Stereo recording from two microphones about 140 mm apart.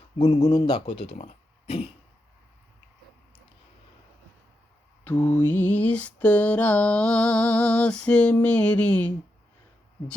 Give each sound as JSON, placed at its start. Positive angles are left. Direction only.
{"t": 0.2, "sound": "speech", "side_deg": 50}
{"t": 5.0, "sound": "mantra", "side_deg": 15}